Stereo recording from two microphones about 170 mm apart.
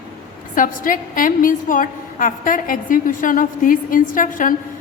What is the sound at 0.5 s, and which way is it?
A woman's voice, 55° left (ahead or behind).